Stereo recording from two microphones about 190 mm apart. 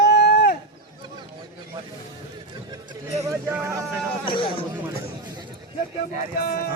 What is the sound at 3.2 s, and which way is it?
Speech, 15° right (ahead or behind).